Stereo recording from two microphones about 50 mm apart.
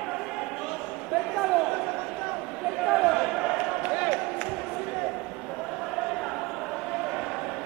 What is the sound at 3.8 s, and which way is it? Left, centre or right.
Basketball bounce, centre.